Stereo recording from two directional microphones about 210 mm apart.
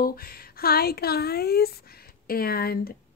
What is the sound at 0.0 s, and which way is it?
Speech, 45° left (ahead or behind).